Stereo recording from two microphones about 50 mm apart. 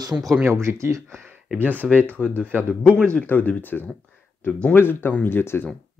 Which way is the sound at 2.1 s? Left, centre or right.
Left.